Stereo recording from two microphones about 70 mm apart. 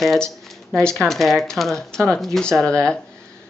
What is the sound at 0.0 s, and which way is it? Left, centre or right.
Speech, centre.